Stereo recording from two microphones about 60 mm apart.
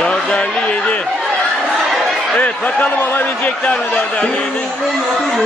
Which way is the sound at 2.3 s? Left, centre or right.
Left.